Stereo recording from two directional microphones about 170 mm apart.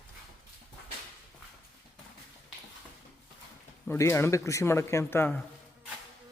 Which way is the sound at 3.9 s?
15° left (ahead or behind).